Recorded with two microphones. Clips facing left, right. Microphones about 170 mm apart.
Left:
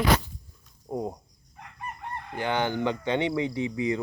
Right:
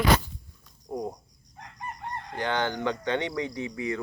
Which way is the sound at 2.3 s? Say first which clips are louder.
Left 2 dB; 10° left (ahead or behind).